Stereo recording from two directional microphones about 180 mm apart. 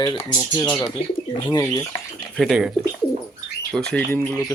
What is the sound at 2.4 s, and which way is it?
Speech, 5° right (ahead or behind).